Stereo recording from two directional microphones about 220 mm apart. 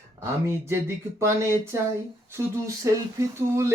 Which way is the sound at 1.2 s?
15° right (ahead or behind).